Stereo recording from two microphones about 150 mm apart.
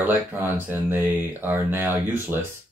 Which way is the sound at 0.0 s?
10° right (ahead or behind).